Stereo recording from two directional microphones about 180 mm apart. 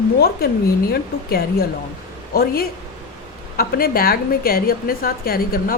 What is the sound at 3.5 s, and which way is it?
A woman's voice, 55° left (ahead or behind).